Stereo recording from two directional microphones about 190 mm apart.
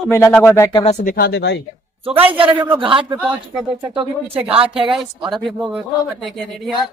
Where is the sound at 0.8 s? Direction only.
35° left (ahead or behind).